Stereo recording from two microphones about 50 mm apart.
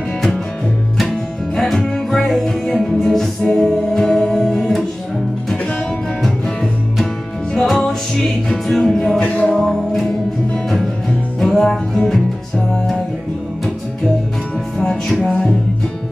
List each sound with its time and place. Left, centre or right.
1.6 s music: centre
7.6 s music: centre
9.2 s music: left
9.5 s music: centre
11.3 s music: centre
12.0 s music: centre
14.8 s music: centre